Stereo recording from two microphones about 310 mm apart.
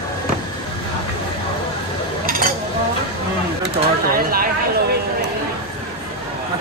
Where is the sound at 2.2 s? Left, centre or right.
Right.